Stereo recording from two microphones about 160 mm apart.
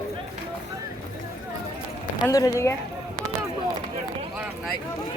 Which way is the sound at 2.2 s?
20° left (ahead or behind).